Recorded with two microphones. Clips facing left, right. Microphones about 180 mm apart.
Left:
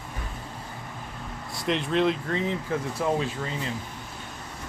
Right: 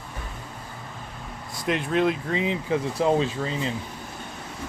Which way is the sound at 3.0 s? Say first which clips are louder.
Right 5 dB; 25° right (ahead or behind).